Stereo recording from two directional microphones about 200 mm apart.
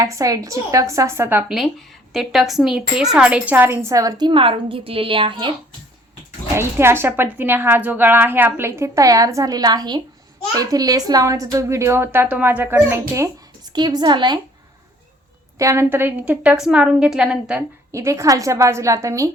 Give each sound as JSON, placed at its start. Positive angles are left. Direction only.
{"t": 0.0, "sound": "a woman's voice", "side_deg": -15}
{"t": 6.6, "sound": "a woman's voice", "side_deg": -10}
{"t": 15.5, "sound": "a woman's voice", "side_deg": -15}